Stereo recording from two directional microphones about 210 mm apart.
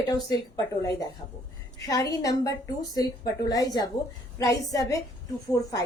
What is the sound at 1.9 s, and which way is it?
Speech, 15° left (ahead or behind).